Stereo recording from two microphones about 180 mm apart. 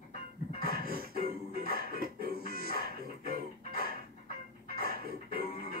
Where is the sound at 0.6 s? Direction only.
55° right (ahead or behind).